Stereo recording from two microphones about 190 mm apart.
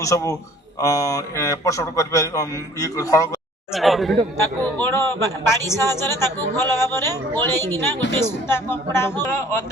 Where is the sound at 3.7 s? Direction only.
Centre (ahead or behind).